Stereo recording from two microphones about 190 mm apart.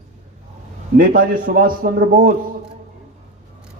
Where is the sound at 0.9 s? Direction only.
45° right (ahead or behind).